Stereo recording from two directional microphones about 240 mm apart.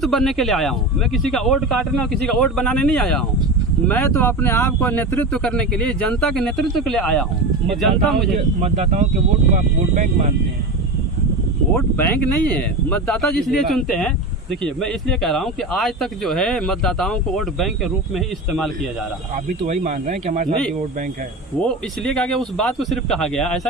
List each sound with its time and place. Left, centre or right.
0.0 s speech: centre
8.6 s speech: right
11.7 s speech: centre
19.6 s speech: right
21.6 s speech: centre